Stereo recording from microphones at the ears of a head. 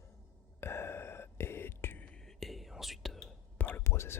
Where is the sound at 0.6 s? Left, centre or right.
Left.